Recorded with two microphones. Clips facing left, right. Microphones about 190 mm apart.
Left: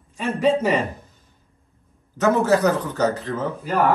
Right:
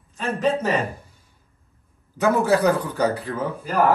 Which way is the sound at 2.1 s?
10° right (ahead or behind).